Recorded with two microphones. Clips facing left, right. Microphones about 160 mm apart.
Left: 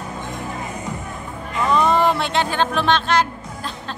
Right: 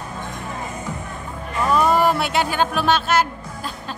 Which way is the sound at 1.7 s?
5° right (ahead or behind).